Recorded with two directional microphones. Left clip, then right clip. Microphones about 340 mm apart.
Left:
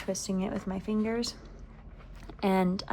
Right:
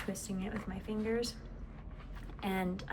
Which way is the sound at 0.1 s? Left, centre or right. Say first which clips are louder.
Left 8 dB; centre.